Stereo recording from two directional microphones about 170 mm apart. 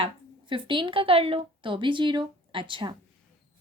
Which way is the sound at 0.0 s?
30° right (ahead or behind).